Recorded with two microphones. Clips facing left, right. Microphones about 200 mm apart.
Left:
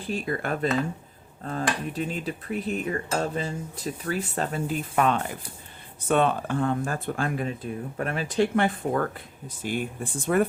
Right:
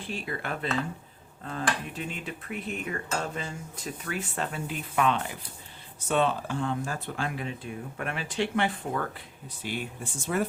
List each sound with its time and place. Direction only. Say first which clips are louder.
0.0 s speech: left 6 dB; 40° left (ahead or behind)
1.9 s speech: left 6 dB; 35° left (ahead or behind); by 10.4 s 55° left (ahead or behind)